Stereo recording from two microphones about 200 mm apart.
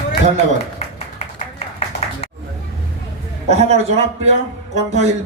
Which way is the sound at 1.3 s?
35° left (ahead or behind).